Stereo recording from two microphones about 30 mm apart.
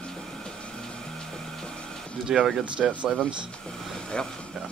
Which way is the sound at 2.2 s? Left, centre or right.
Centre.